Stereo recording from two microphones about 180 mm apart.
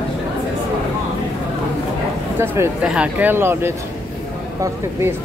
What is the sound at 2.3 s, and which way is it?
Speech, 15° right (ahead or behind).